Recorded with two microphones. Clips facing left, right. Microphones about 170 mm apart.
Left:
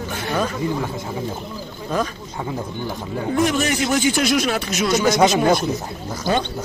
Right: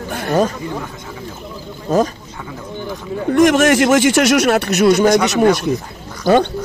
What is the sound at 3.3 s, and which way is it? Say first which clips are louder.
Speech: right 8 dB; 85° right.